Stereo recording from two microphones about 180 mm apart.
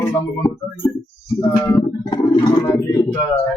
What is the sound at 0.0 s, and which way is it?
Speech, 20° left (ahead or behind).